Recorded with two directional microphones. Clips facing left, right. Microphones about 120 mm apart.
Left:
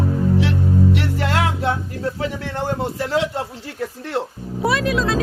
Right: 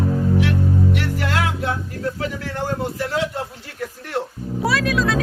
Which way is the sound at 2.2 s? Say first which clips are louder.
Left 2 dB; 25° left (ahead or behind).